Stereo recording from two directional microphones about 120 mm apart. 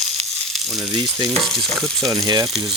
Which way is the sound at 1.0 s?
35° right (ahead or behind).